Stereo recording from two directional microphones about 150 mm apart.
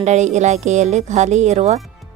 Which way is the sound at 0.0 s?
50° right (ahead or behind).